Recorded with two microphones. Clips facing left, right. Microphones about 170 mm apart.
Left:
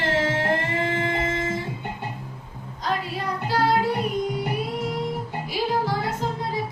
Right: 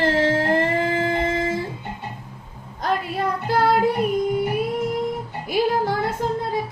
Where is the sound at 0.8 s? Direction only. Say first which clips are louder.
Right 3 dB; 35° right (ahead or behind).